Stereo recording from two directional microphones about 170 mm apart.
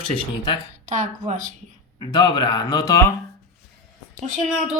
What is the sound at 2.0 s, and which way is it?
Speech, 25° left (ahead or behind).